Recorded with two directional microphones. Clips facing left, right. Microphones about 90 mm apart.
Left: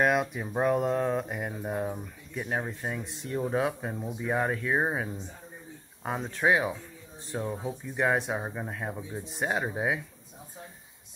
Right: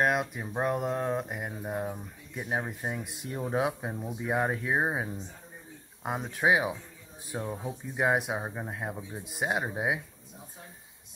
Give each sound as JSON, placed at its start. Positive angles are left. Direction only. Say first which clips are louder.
{"t": 0.0, "sound": "speech", "louder": "left 2 dB", "side_deg": 0}
{"t": 2.3, "sound": "speech", "louder": "left 1 dB", "side_deg": -15}